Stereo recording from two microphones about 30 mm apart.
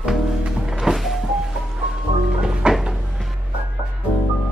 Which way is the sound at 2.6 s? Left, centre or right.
Right.